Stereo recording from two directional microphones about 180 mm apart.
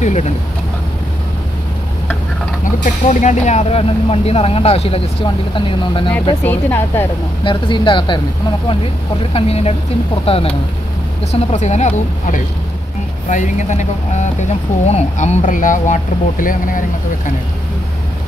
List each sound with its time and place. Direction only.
0.0 s vehicle: 40° left (ahead or behind)
2.6 s speech: 45° left (ahead or behind); by 6.1 s 30° left (ahead or behind)
6.4 s a woman's voice: 10° left (ahead or behind)
7.4 s speech: 25° left (ahead or behind)
9.3 s speech: 35° left (ahead or behind)
13.3 s speech: 40° left (ahead or behind)